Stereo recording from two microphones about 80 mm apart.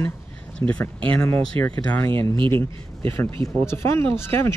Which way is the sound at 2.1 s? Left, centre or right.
Right.